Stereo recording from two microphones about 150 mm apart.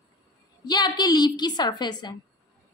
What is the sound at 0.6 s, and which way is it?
A woman's voice, 30° left (ahead or behind).